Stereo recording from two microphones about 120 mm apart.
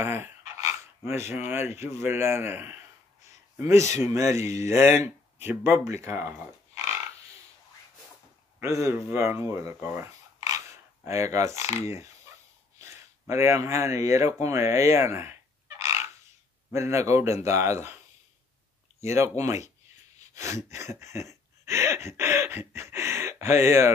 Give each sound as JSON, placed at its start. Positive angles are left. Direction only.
{"t": 0.0, "sound": "dog", "side_deg": -20}
{"t": 1.3, "sound": "speech", "side_deg": -20}
{"t": 8.5, "sound": "speech", "side_deg": -25}
{"t": 9.5, "sound": "a sound", "side_deg": -20}
{"t": 11.1, "sound": "speech", "side_deg": -25}
{"t": 15.8, "sound": "bird", "side_deg": -25}
{"t": 16.7, "sound": "speech", "side_deg": -25}
{"t": 19.0, "sound": "speech", "side_deg": -25}
{"t": 20.3, "sound": "a sound", "side_deg": -25}